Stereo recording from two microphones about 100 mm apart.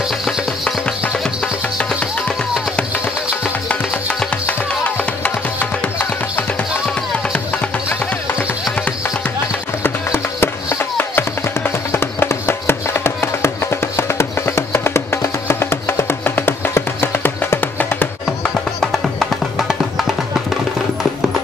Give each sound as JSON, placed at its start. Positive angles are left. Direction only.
{"t": 1.9, "sound": "music", "side_deg": 5}
{"t": 4.5, "sound": "music", "side_deg": 15}
{"t": 9.8, "sound": "music", "side_deg": 25}
{"t": 18.8, "sound": "music", "side_deg": 5}